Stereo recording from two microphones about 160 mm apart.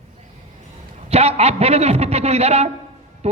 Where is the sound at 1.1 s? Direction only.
40° right (ahead or behind).